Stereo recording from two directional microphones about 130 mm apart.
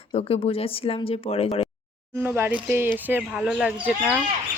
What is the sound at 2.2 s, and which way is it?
Speech, 15° right (ahead or behind).